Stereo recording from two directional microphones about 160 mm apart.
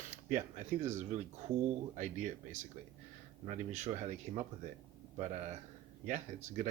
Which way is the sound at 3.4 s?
45° right (ahead or behind).